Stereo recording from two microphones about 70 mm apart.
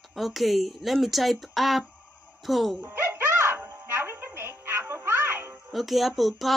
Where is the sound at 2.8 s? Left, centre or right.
Right.